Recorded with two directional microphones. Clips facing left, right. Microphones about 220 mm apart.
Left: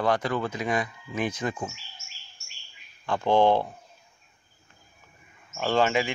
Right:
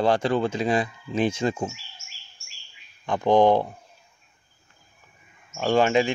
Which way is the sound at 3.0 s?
15° right (ahead or behind).